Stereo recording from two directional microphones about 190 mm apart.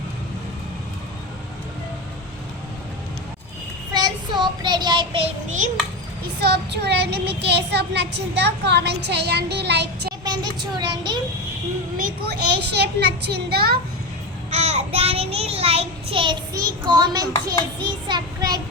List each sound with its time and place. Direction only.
3.9 s child singing: 20° right (ahead or behind)
6.4 s child singing: 60° right (ahead or behind)
10.2 s a child's voice: 20° right (ahead or behind)
11.9 s child singing: 55° right (ahead or behind)
14.5 s child singing: 35° right (ahead or behind); by 17.2 s 20° right (ahead or behind)
17.7 s a child's voice: 20° right (ahead or behind)